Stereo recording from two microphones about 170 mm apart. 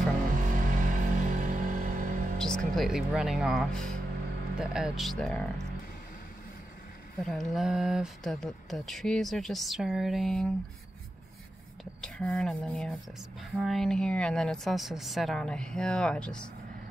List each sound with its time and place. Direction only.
0.4 s music: 50° right (ahead or behind)
2.3 s speech: 5° left (ahead or behind)
7.2 s speech: centre (ahead or behind)
11.8 s speech: 5° left (ahead or behind)